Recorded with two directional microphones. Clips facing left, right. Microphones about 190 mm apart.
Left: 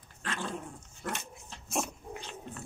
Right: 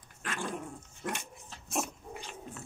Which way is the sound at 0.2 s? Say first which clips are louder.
Even; 10° right (ahead or behind).